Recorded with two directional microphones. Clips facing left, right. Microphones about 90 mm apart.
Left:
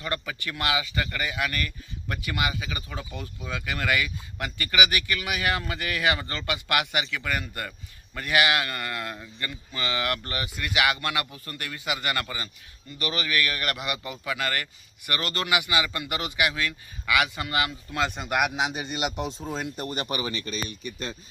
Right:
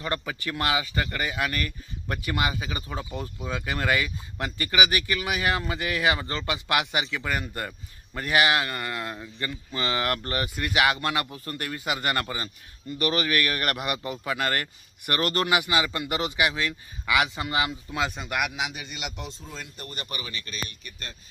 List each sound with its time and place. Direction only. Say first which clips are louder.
0.0 s speech: right 2 dB; 25° right (ahead or behind)
9.4 s speech: right 3 dB; 35° right (ahead or behind)
17.9 s speech: left 1 dB; 5° right (ahead or behind)
18.2 s a man's voice: left 3 dB; 15° left (ahead or behind)
18.5 s a man's voice: left 4 dB; 35° left (ahead or behind)
19.4 s speech: left 8 dB; 60° left (ahead or behind)